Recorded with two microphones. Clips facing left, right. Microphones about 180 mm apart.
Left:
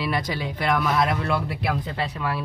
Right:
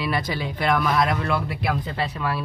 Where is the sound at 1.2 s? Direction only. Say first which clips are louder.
Even; 35° left (ahead or behind).